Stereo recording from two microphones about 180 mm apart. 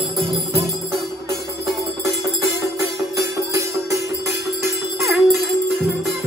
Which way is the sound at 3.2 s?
15° right (ahead or behind).